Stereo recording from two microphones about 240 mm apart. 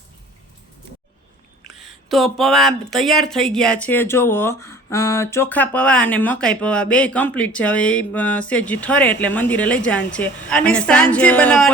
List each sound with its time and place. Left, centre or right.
1.7 s speech: centre